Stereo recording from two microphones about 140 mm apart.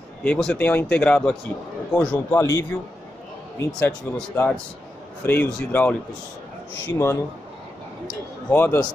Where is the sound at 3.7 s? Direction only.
10° left (ahead or behind).